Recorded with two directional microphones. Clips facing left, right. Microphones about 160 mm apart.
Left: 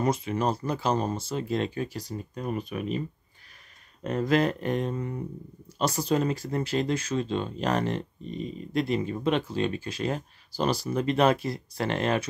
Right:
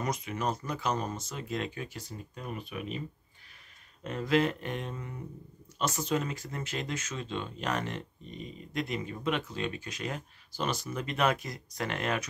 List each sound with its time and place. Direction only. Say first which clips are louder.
0.0 s speech: left 6 dB; 30° left (ahead or behind)
4.0 s speech: left 4 dB; 40° left (ahead or behind)